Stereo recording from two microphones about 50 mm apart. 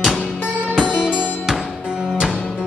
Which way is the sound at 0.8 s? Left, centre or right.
Centre.